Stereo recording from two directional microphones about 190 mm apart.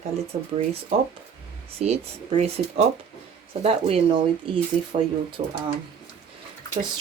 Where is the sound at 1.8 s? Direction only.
35° right (ahead or behind).